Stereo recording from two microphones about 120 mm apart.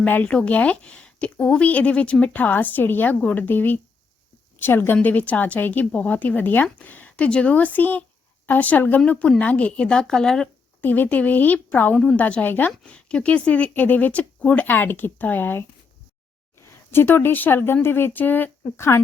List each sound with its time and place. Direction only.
0.0 s a woman's voice: 10° left (ahead or behind)
10.8 s a woman's voice: 15° left (ahead or behind)
16.9 s a woman's voice: 20° left (ahead or behind)